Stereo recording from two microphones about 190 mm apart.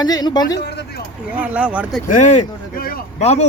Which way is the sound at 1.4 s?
5° right (ahead or behind).